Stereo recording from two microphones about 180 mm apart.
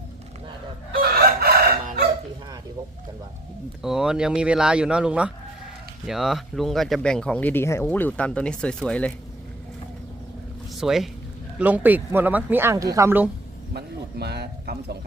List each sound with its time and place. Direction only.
0.9 s chicken: 55° right (ahead or behind)
3.8 s speech: 5° right (ahead or behind)
10.8 s speech: centre (ahead or behind)
13.7 s a man's voice: 65° right (ahead or behind)